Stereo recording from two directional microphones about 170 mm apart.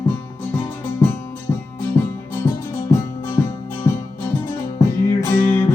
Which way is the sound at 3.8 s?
20° left (ahead or behind).